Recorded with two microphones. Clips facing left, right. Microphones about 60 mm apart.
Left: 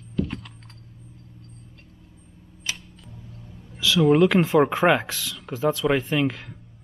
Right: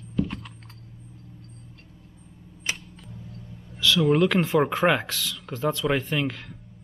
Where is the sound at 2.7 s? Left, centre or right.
Right.